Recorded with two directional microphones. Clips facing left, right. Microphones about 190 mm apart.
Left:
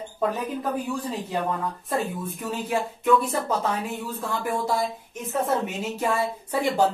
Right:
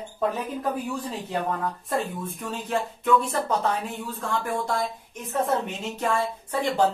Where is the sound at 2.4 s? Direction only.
10° left (ahead or behind).